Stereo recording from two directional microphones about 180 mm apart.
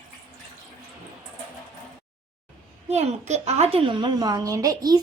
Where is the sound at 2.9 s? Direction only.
35° right (ahead or behind).